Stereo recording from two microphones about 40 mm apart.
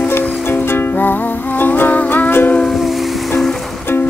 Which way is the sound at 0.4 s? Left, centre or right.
Left.